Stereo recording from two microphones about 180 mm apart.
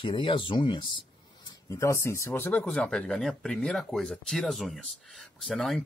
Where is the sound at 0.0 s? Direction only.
25° left (ahead or behind).